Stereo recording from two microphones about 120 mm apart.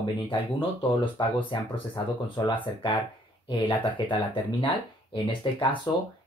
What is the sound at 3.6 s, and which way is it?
Speech, 40° left (ahead or behind).